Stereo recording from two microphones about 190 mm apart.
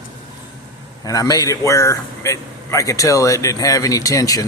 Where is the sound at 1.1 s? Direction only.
20° left (ahead or behind).